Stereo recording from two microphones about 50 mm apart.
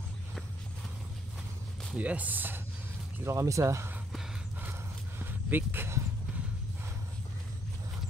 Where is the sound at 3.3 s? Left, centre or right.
Right.